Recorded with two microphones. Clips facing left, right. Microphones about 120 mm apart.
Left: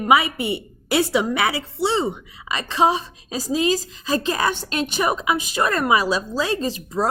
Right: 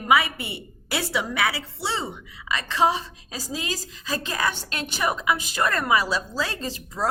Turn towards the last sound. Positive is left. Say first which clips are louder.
# left 8 dB
turn(degrees=20)  # may be behind; listen again after turning